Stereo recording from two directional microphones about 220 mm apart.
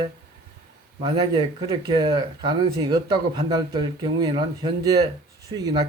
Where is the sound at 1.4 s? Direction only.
20° right (ahead or behind).